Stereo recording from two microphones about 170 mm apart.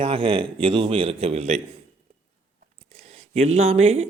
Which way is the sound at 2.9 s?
40° right (ahead or behind).